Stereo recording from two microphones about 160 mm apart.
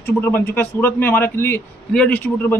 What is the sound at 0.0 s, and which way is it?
A man's voice, 15° left (ahead or behind).